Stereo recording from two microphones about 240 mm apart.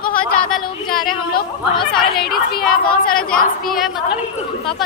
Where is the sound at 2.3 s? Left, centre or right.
Left.